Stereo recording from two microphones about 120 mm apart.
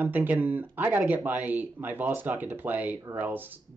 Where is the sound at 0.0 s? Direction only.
15° right (ahead or behind).